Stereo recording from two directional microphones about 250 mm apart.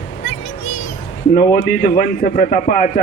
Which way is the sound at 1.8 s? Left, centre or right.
Left.